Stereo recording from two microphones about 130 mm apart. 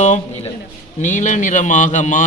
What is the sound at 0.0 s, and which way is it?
Speech, 65° left (ahead or behind).